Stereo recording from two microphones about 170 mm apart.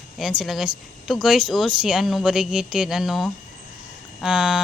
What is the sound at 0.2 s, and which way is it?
Speech, centre (ahead or behind).